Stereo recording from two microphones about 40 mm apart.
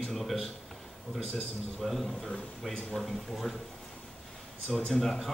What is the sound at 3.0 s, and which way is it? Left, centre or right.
Speech, centre.